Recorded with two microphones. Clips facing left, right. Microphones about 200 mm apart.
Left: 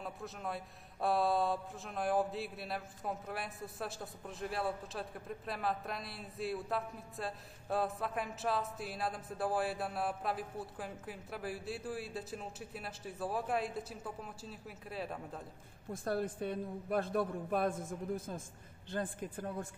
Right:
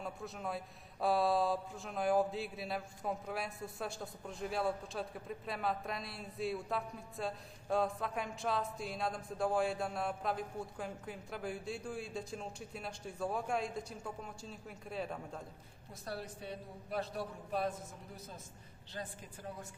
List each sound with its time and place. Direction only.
0.0 s a man's voice: centre (ahead or behind)
15.9 s a woman's voice: 50° left (ahead or behind)